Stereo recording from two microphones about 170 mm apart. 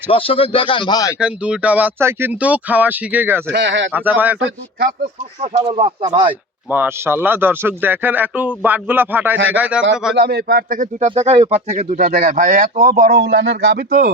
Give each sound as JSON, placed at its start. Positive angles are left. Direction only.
{"t": 0.1, "sound": "speech", "side_deg": 30}
{"t": 1.2, "sound": "speech", "side_deg": -5}
{"t": 3.5, "sound": "speech", "side_deg": -90}
{"t": 3.9, "sound": "speech", "side_deg": -10}
{"t": 5.6, "sound": "speech", "side_deg": -30}
{"t": 6.7, "sound": "a man's voice", "side_deg": -10}
{"t": 10.2, "sound": "a man's voice", "side_deg": -70}
{"t": 11.1, "sound": "speech", "side_deg": -35}